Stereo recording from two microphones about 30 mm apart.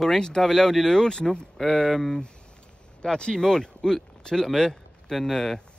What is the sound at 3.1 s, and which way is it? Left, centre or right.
Speech, left.